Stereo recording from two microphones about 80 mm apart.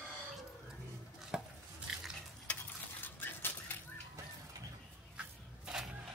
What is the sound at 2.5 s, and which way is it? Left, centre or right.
Stir, centre.